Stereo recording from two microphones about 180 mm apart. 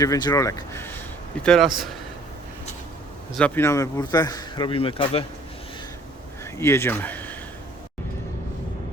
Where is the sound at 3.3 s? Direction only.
10° left (ahead or behind); by 5.2 s 30° left (ahead or behind).